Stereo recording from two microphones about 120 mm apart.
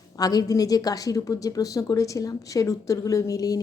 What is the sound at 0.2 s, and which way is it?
A woman's voice, 30° left (ahead or behind).